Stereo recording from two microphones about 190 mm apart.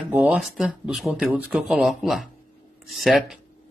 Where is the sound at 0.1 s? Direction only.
5° right (ahead or behind).